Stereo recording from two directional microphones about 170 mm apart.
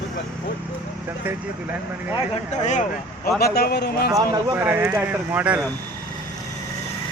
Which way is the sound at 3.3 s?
65° left (ahead or behind).